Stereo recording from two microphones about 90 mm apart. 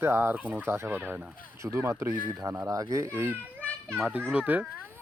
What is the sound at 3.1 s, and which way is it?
Speech, 25° right (ahead or behind).